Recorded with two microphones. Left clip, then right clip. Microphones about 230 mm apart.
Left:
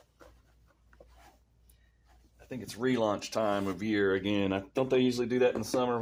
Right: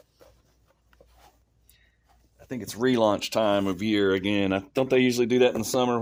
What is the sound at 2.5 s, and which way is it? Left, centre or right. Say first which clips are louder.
Speech: right 6 dB; right.